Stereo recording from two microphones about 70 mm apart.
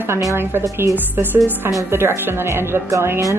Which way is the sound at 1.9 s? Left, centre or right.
Right.